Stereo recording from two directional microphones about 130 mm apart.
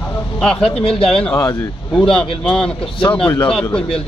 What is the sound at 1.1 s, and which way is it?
A man's voice, 5° left (ahead or behind).